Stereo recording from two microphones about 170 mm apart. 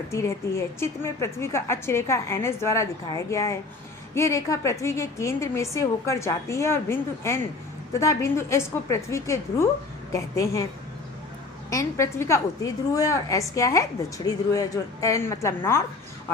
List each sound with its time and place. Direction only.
0.1 s a woman's voice: 15° left (ahead or behind)
11.7 s a woman's voice: 15° left (ahead or behind)